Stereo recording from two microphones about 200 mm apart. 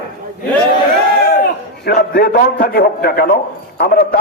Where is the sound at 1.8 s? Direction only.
55° left (ahead or behind).